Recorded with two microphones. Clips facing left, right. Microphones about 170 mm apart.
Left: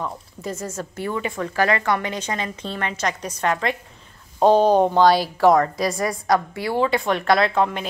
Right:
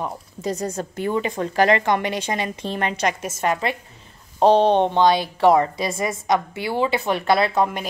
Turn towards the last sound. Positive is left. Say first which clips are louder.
# even
turn(degrees=-5)  # may be behind; listen again after turning